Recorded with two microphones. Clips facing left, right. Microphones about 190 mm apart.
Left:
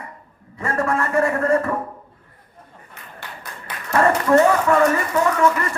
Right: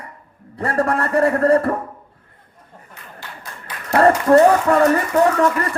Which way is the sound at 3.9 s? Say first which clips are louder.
Right 3 dB; 35° right (ahead or behind).